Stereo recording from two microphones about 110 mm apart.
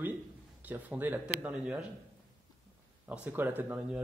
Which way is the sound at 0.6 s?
15° right (ahead or behind).